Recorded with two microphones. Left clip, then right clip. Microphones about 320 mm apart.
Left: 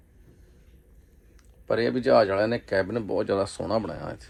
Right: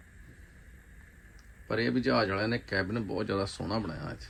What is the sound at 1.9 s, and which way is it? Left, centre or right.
Speech, centre.